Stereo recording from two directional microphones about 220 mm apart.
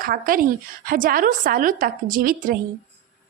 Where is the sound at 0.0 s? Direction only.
40° right (ahead or behind).